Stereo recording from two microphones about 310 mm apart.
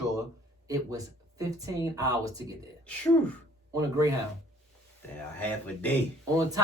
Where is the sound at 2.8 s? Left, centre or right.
Centre.